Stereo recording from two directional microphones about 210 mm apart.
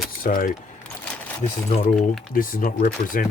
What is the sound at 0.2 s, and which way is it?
Speech, 40° left (ahead or behind).